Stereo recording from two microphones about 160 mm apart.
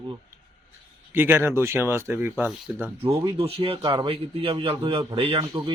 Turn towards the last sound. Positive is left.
turn(degrees=-30)  # may be behind; listen again after turning